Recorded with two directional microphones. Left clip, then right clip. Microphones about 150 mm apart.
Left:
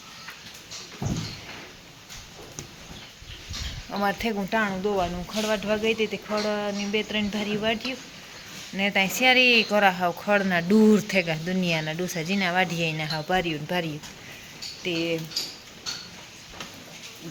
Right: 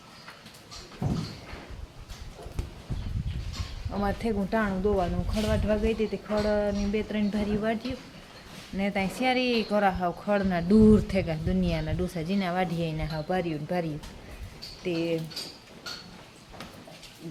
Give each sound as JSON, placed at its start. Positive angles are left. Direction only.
{"t": 3.8, "sound": "speech", "side_deg": 5}
{"t": 4.2, "sound": "speech", "side_deg": -5}
{"t": 8.7, "sound": "speech", "side_deg": -10}
{"t": 14.8, "sound": "speech", "side_deg": -15}